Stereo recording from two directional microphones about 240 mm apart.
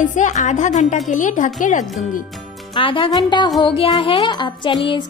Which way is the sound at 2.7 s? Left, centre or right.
Centre.